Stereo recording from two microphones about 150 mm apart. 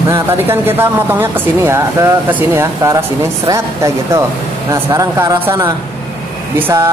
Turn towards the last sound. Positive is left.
turn(degrees=-20)  # may be behind; listen again after turning